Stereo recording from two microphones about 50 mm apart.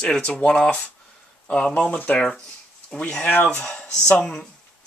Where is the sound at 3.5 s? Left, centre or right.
Left.